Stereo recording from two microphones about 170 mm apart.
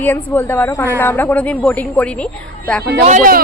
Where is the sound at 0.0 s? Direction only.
10° left (ahead or behind).